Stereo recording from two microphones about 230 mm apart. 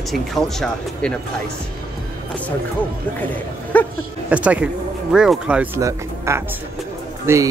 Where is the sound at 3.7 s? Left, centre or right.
Centre.